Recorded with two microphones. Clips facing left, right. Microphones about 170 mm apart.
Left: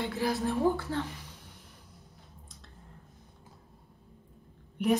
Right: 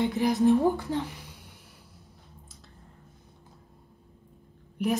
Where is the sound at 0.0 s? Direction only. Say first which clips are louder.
Right 7 dB; 20° right (ahead or behind).